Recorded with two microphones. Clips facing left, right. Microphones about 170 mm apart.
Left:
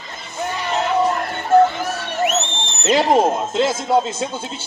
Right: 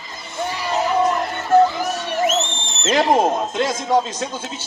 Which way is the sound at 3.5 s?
25° left (ahead or behind).